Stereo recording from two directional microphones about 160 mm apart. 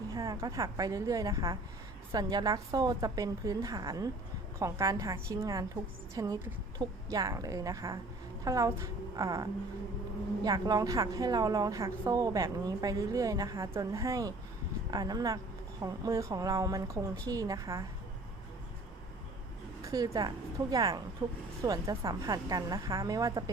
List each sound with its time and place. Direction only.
0.1 s a woman's voice: 20° right (ahead or behind)
19.8 s a woman's voice: 25° right (ahead or behind)